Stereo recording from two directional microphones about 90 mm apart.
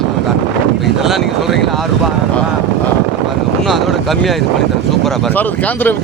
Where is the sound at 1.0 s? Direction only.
Centre (ahead or behind).